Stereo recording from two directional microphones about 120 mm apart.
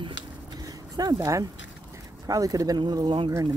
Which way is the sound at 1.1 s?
25° right (ahead or behind).